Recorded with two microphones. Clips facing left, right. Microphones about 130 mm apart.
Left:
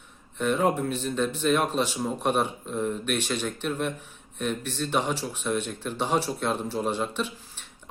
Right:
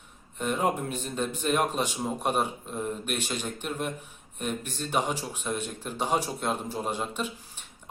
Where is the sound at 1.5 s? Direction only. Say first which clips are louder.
Left 1 dB; 10° right (ahead or behind).